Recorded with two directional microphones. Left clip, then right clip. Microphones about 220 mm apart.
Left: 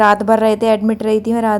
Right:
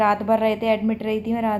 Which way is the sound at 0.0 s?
45° left (ahead or behind).